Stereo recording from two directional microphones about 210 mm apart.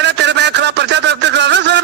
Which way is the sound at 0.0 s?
55° right (ahead or behind).